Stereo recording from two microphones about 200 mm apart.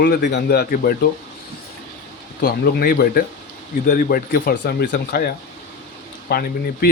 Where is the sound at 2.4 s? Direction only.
50° left (ahead or behind).